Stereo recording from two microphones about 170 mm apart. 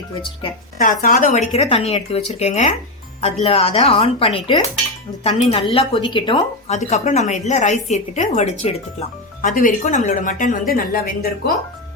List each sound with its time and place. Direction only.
1.0 s speech: 50° left (ahead or behind); by 6.4 s 30° left (ahead or behind)
6.7 s a woman's voice: 45° left (ahead or behind)